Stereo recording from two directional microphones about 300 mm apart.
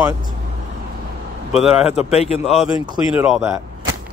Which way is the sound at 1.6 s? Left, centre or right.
Centre.